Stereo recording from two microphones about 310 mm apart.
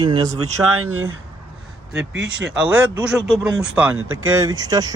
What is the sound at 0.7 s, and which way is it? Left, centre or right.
Speech, right.